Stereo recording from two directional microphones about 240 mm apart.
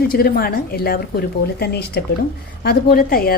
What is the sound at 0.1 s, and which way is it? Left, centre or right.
A woman's voice, left.